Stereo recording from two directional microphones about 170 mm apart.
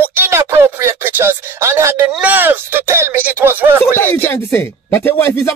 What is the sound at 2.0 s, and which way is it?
Speech, 5° right (ahead or behind).